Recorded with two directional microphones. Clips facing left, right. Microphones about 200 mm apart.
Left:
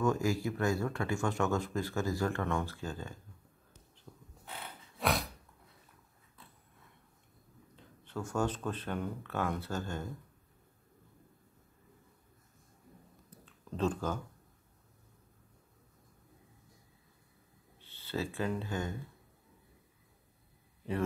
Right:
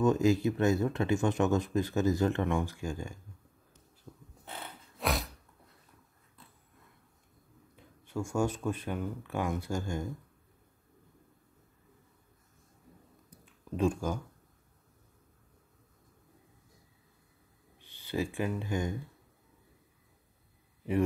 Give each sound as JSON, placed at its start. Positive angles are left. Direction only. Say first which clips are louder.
{"t": 0.0, "sound": "speech", "louder": "right 5 dB", "side_deg": -20}
{"t": 4.1, "sound": "bird", "louder": "right 3 dB", "side_deg": -10}
{"t": 4.9, "sound": "a sound", "louder": "even", "side_deg": 0}
{"t": 7.7, "sound": "speech", "louder": "right 4 dB", "side_deg": -10}
{"t": 13.3, "sound": "a sound", "louder": "right 5 dB", "side_deg": -10}
{"t": 17.7, "sound": "speech", "louder": "right 3 dB", "side_deg": -15}